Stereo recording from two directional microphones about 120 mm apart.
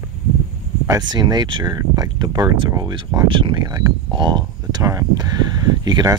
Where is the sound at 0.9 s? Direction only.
35° right (ahead or behind).